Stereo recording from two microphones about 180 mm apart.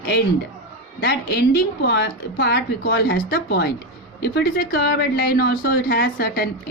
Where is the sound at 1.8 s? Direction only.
70° left (ahead or behind).